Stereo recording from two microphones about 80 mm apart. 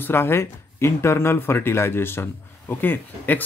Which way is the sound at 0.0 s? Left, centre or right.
Left.